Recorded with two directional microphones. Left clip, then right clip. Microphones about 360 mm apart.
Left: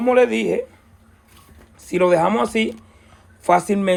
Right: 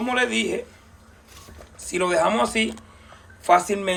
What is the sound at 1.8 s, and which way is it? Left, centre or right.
Speech, centre.